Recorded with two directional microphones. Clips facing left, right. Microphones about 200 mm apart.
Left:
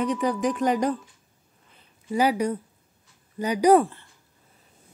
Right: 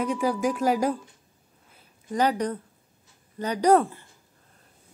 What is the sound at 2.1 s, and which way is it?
Speech, 10° left (ahead or behind).